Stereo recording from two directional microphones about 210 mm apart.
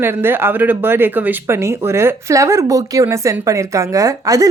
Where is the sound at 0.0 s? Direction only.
10° right (ahead or behind).